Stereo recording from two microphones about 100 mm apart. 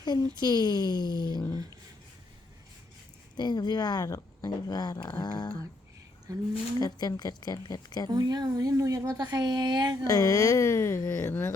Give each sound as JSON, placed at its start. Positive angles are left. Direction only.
{"t": 0.0, "sound": "speech", "side_deg": 45}
{"t": 3.3, "sound": "speech", "side_deg": 45}
{"t": 6.3, "sound": "speech", "side_deg": -40}
{"t": 6.7, "sound": "speech", "side_deg": 40}
{"t": 8.1, "sound": "speech", "side_deg": -45}
{"t": 10.0, "sound": "speech", "side_deg": 35}